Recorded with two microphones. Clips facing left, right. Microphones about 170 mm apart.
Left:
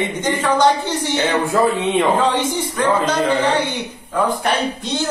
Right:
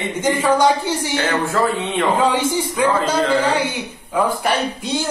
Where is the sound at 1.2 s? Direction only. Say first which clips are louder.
Left 3 dB; 15° left (ahead or behind).